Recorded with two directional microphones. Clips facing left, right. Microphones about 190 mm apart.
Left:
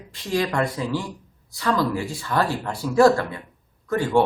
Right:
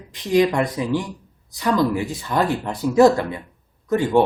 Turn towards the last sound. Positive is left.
turn(degrees=-20)  # may be behind; listen again after turning